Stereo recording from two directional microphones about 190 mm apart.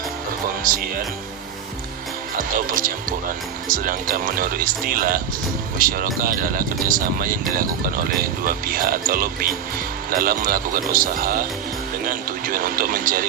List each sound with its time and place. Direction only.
0.7 s speech: 45° right (ahead or behind)
2.4 s a man's voice: 45° right (ahead or behind)